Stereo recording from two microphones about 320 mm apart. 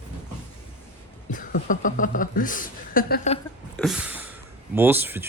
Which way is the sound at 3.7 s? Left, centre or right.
Centre.